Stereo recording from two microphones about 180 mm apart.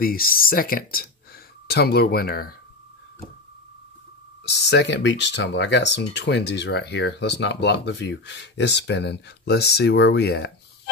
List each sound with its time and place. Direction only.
0.0 s speech: 55° left (ahead or behind)
4.5 s speech: 70° left (ahead or behind)